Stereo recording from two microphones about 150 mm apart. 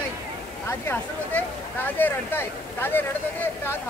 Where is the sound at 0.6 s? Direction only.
15° left (ahead or behind).